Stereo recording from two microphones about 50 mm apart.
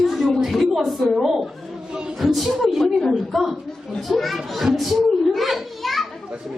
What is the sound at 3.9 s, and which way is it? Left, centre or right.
Children playing, centre.